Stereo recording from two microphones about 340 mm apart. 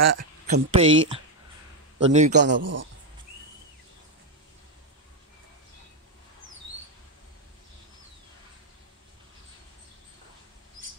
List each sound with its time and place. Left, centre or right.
0.0 s speech: right
0.5 s a man's voice: centre
2.3 s speech: right